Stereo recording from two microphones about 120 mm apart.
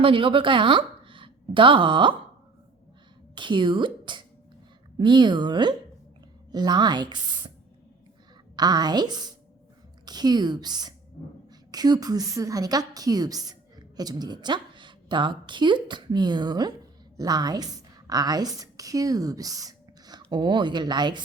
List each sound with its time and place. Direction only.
0.0 s a woman's voice: 45° right (ahead or behind)
3.3 s a woman's voice: 40° right (ahead or behind)
8.5 s a woman's voice: 35° right (ahead or behind)